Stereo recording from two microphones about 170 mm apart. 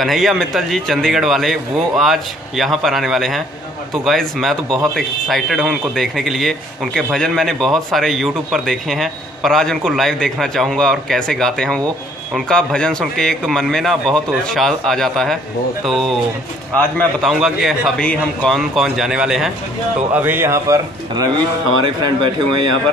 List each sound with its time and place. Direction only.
0.0 s a man's voice: centre (ahead or behind); by 21.3 s 20° right (ahead or behind)
21.8 s speech: 30° right (ahead or behind)